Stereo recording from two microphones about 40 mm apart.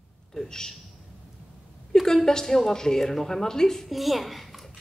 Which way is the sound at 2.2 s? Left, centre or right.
Centre.